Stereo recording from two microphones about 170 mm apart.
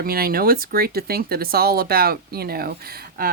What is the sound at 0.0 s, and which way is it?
A woman's voice, 60° right (ahead or behind).